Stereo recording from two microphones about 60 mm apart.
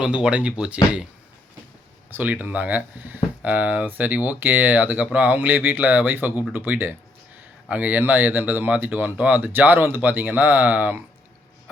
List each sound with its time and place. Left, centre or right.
0.0 s speech: centre
2.0 s speech: right